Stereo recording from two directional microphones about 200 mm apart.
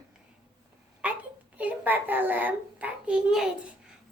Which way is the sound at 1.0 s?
5° right (ahead or behind).